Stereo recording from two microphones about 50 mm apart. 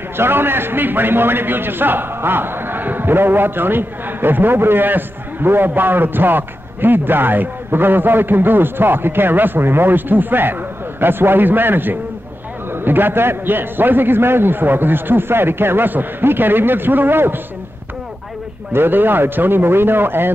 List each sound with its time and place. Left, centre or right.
0.2 s a man's voice: right
18.7 s a man's voice: right